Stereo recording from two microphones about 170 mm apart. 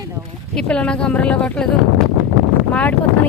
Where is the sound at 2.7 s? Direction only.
10° left (ahead or behind).